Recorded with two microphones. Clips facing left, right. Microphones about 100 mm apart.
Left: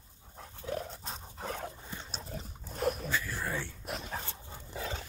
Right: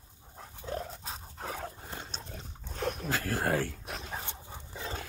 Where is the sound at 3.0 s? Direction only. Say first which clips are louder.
Right 4 dB; 90° right.